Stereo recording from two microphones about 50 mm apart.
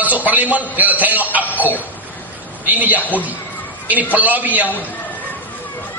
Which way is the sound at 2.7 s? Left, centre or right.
Right.